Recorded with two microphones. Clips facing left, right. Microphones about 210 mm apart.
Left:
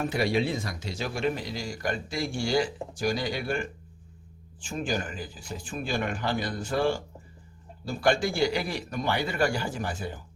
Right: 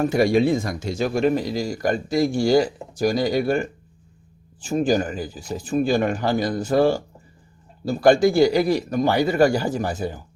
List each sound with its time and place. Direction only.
0.0 s speech: 45° right (ahead or behind)